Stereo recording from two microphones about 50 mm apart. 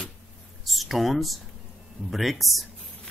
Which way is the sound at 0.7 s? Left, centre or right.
Centre.